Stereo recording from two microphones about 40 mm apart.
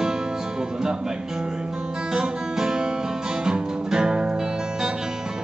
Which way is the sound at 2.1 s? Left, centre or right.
Centre.